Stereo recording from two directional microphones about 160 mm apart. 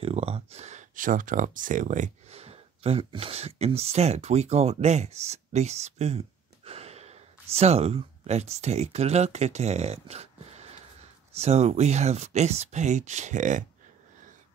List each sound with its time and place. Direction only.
0.0 s speech: 40° right (ahead or behind)